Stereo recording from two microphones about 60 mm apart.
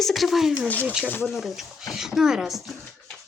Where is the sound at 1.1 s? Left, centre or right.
Left.